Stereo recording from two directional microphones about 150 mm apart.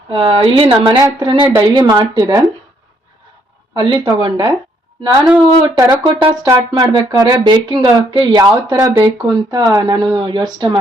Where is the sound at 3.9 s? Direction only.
25° right (ahead or behind).